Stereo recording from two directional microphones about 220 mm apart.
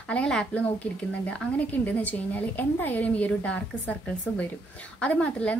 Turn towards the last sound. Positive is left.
turn(degrees=5)  # may be behind; listen again after turning